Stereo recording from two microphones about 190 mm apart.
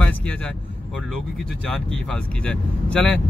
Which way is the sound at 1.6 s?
5° left (ahead or behind).